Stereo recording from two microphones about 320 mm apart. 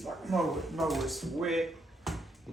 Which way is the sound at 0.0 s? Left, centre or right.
Centre.